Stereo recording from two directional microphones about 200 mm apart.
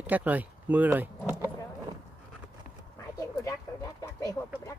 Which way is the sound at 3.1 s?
15° left (ahead or behind).